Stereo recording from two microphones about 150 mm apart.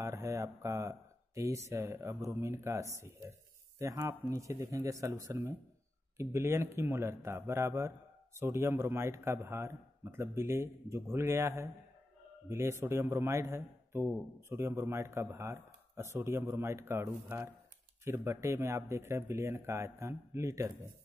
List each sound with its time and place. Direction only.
0.0 s a man's voice: 20° right (ahead or behind)